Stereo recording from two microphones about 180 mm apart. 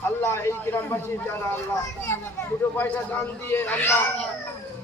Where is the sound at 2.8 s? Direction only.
10° left (ahead or behind).